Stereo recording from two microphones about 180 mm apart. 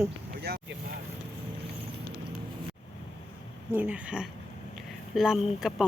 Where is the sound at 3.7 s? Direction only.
10° right (ahead or behind).